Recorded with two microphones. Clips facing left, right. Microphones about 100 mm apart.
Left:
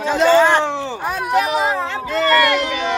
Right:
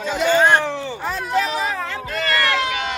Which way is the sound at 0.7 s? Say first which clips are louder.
Left 3 dB; 30° left (ahead or behind).